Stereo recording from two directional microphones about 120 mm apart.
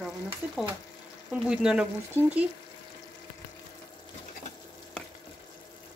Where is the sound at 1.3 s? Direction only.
5° right (ahead or behind).